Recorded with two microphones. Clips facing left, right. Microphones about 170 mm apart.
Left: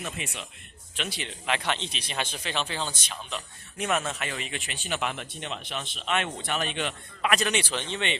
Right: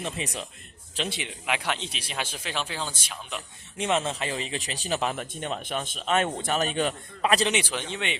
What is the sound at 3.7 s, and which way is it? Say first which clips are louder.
Speech: right 2 dB; 25° right (ahead or behind).